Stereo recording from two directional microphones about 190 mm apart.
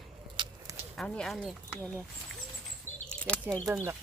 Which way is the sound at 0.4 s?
25° right (ahead or behind).